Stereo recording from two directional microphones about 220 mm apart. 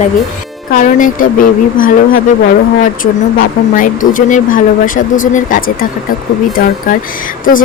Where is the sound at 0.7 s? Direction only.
35° left (ahead or behind).